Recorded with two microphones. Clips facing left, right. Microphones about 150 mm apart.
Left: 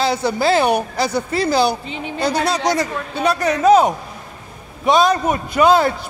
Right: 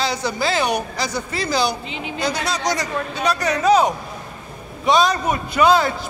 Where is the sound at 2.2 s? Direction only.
30° left (ahead or behind).